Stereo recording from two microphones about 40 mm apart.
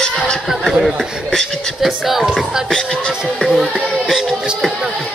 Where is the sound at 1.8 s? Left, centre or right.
Centre.